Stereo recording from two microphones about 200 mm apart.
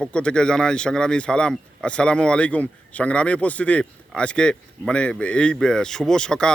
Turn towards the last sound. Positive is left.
turn(degrees=5)  # may be behind; listen again after turning